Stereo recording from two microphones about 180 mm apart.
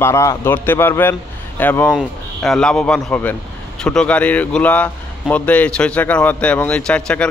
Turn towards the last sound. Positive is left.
turn(degrees=5)  # may be behind; listen again after turning